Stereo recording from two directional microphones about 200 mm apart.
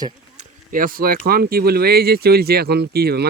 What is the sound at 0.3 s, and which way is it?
Speech, 45° right (ahead or behind).